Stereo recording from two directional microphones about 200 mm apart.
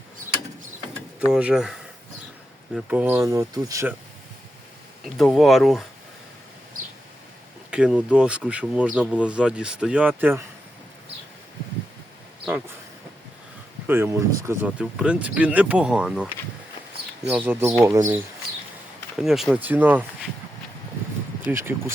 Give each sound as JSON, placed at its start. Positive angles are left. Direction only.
{"t": 1.3, "sound": "speech", "side_deg": -5}
{"t": 5.1, "sound": "speech", "side_deg": 0}
{"t": 7.7, "sound": "speech", "side_deg": -5}
{"t": 13.8, "sound": "speech", "side_deg": -10}
{"t": 19.1, "sound": "speech", "side_deg": 0}
{"t": 21.4, "sound": "speech", "side_deg": -10}